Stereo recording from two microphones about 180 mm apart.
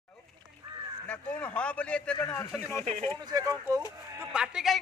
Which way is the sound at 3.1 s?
20° right (ahead or behind).